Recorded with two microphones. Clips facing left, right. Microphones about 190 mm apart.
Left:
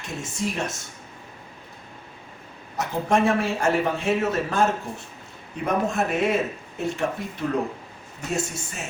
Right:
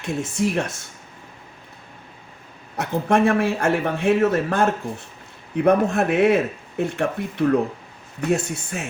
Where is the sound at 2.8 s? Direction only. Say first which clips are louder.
Right 3 dB; 60° right (ahead or behind).